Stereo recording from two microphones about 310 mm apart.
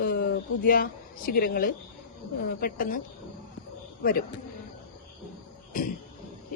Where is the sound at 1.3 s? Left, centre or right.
Left.